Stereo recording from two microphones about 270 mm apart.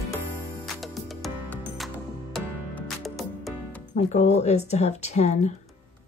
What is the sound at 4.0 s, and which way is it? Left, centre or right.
Speech, left.